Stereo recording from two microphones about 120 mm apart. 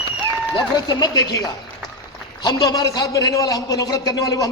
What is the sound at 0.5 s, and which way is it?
A man's voice, 35° left (ahead or behind).